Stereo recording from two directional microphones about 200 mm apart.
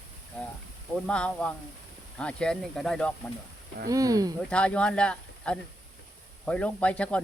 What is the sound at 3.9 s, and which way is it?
Speech, 15° right (ahead or behind).